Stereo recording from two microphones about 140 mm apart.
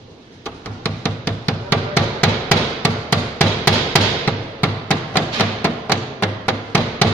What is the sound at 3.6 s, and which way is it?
Hammer, 15° left (ahead or behind).